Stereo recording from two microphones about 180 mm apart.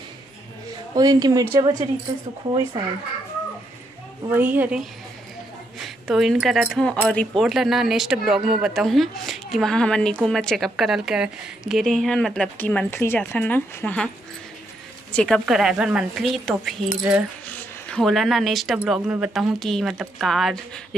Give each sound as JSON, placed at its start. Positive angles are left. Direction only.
{"t": 0.9, "sound": "speech", "side_deg": -20}
{"t": 4.3, "sound": "a woman's voice", "side_deg": -10}
{"t": 5.9, "sound": "a woman's voice", "side_deg": 0}